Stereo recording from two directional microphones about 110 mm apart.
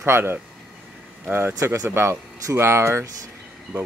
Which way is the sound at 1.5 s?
30° right (ahead or behind).